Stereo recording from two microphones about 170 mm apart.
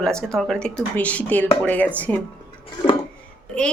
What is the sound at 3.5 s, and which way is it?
Speech, 5° left (ahead or behind).